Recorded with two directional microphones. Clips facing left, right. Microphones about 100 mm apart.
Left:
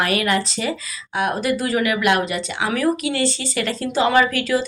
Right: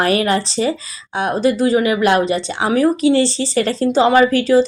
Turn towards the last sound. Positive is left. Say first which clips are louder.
# right 6 dB
turn(degrees=-30)  # may be behind; listen again after turning